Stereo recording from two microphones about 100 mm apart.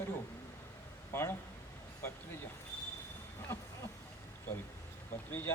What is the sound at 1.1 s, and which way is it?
Speech, 25° left (ahead or behind).